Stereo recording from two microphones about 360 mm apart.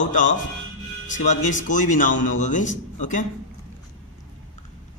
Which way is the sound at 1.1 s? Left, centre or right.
Left.